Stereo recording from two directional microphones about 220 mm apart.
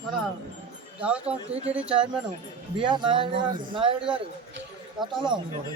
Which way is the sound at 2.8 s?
20° right (ahead or behind).